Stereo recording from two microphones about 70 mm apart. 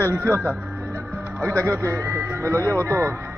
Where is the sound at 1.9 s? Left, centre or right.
Right.